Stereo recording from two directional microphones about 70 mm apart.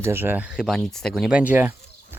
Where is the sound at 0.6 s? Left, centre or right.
Centre.